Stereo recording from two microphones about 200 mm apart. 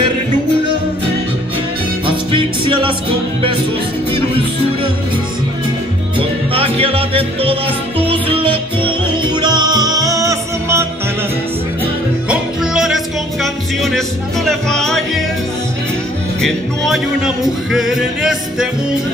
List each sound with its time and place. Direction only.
2.0 s music: 25° right (ahead or behind)
6.1 s music: 30° right (ahead or behind)
12.3 s music: 5° right (ahead or behind)
16.3 s music: centre (ahead or behind)